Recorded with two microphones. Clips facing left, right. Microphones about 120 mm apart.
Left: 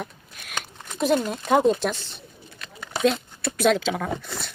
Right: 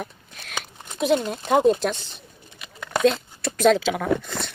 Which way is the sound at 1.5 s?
Centre (ahead or behind).